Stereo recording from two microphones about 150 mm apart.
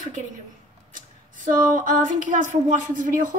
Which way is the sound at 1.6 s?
65° right (ahead or behind).